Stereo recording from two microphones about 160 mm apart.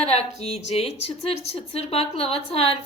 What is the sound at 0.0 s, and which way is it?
A woman's voice, 40° left (ahead or behind).